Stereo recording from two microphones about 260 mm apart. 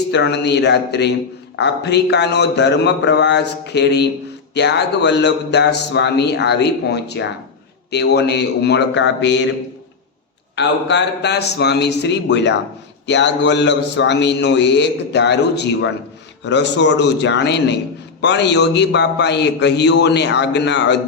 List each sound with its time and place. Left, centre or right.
0.1 s a man's voice: left
10.5 s a man's voice: left